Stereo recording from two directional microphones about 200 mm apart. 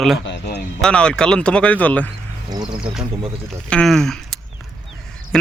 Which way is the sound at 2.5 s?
20° right (ahead or behind).